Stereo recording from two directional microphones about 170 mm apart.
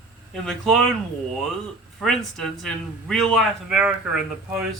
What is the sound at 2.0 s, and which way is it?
A man's voice, centre (ahead or behind).